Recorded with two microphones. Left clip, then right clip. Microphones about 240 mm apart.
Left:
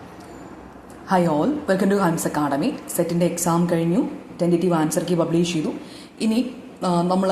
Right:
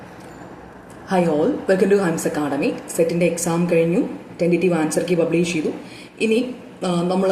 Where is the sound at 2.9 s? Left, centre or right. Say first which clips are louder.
Right 4 dB; left.